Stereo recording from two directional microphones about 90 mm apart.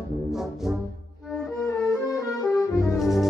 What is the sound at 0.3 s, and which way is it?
Music, 5° right (ahead or behind).